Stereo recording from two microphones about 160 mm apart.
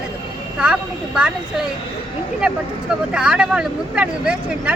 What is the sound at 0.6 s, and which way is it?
Speech, 5° right (ahead or behind).